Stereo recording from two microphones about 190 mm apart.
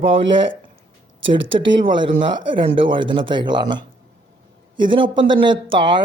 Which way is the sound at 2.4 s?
25° right (ahead or behind).